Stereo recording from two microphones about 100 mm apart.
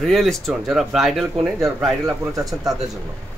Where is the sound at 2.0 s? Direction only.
35° right (ahead or behind).